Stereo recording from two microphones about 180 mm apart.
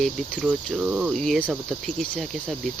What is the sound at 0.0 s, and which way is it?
Cricket, centre (ahead or behind).